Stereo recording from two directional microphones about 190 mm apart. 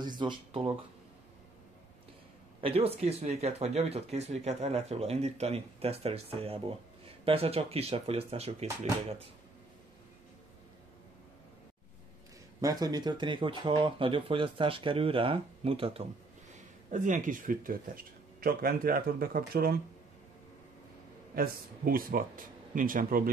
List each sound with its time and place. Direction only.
0.0 s speech: 25° right (ahead or behind)
2.6 s speech: 30° right (ahead or behind)
12.5 s speech: 20° right (ahead or behind)
16.9 s speech: 40° right (ahead or behind)
21.4 s speech: 50° right (ahead or behind)